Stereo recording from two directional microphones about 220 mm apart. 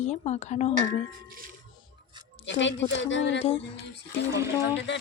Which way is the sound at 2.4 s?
55° left (ahead or behind).